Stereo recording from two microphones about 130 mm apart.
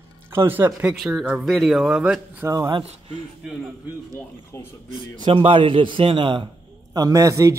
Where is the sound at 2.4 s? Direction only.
20° right (ahead or behind).